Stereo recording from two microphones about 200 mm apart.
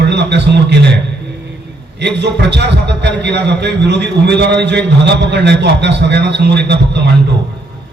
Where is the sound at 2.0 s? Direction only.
60° right (ahead or behind).